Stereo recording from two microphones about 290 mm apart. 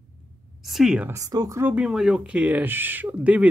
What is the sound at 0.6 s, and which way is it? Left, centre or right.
Speech, centre.